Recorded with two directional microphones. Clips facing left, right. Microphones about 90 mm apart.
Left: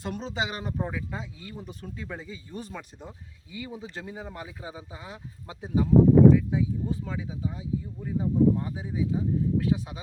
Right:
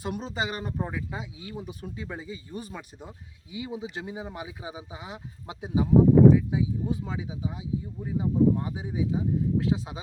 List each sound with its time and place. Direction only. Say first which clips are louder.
0.0 s speech: even; 5° right (ahead or behind)